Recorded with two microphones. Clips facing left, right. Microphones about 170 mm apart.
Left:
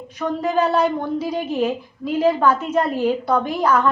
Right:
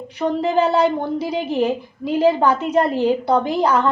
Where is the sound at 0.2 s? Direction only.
15° right (ahead or behind).